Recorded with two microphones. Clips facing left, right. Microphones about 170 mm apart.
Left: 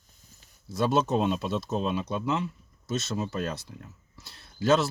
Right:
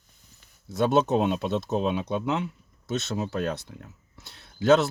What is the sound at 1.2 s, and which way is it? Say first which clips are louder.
Speech: right 2 dB; 55° right (ahead or behind).